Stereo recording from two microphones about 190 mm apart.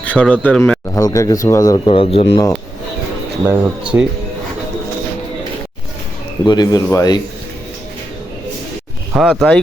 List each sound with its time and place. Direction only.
0.0 s speech: 5° left (ahead or behind)
0.9 s speech: 15° left (ahead or behind)
3.4 s speech: 5° right (ahead or behind)
6.4 s speech: 20° left (ahead or behind)
9.1 s speech: 5° right (ahead or behind)